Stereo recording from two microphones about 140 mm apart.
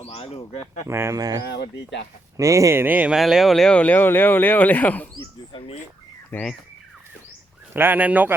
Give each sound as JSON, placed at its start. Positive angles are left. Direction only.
{"t": 0.0, "sound": "speech", "side_deg": 45}
{"t": 0.9, "sound": "speech", "side_deg": -20}
{"t": 5.5, "sound": "speech", "side_deg": 40}
{"t": 6.3, "sound": "speech", "side_deg": 5}
{"t": 7.7, "sound": "speech", "side_deg": -15}